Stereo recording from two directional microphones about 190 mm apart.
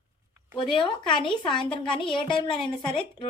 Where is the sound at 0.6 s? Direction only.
25° left (ahead or behind).